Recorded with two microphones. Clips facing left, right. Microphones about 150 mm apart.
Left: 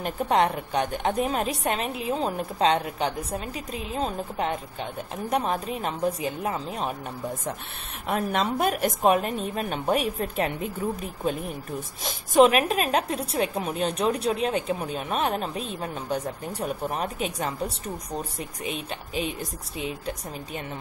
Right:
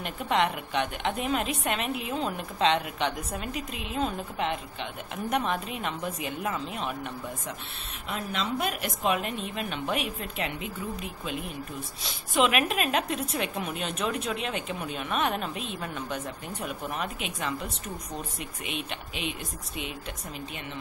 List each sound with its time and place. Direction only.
0.0 s a woman's voice: 40° left (ahead or behind)
8.1 s a woman's voice: 50° left (ahead or behind)